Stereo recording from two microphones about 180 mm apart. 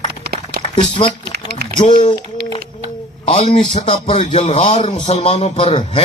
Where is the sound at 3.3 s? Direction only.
40° left (ahead or behind).